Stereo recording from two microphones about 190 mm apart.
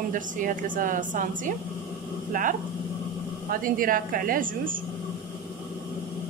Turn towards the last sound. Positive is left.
turn(degrees=-45)  # may be behind; listen again after turning